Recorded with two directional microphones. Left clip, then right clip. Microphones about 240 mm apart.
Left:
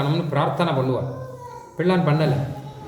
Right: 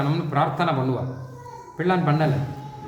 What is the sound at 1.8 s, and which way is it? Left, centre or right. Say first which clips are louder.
Speech: left 1 dB; centre.